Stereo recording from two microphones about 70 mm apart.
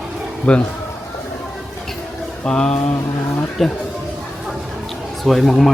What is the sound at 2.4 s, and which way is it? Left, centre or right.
Speech, centre.